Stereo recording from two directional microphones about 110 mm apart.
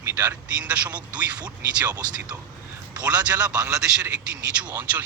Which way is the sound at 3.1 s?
10° right (ahead or behind).